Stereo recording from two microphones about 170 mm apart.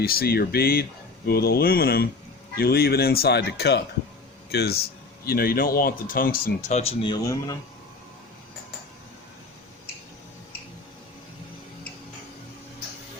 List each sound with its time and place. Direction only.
0.0 s speech: 60° left (ahead or behind); by 3.8 s 80° left
4.5 s speech: 70° left (ahead or behind); by 6.9 s 40° left (ahead or behind)
7.0 s speech: 25° left (ahead or behind)